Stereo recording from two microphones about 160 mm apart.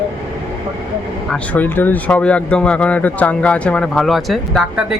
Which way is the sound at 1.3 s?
10° left (ahead or behind).